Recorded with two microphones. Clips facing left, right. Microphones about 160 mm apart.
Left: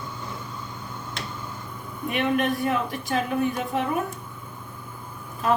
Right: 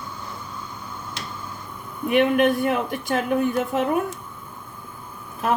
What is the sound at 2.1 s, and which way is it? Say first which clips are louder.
A woman's voice: right 6 dB; 60° right (ahead or behind).